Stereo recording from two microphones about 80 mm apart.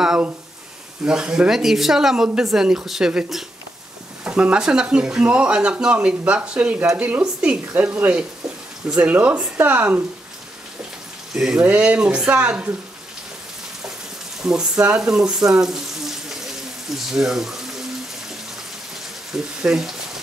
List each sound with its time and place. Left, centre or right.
1.0 s speech: centre
11.3 s speech: centre
11.6 s speech: centre
14.4 s speech: centre
19.3 s speech: centre